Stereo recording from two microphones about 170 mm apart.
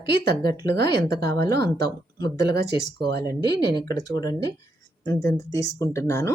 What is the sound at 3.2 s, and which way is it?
Speech, 25° left (ahead or behind).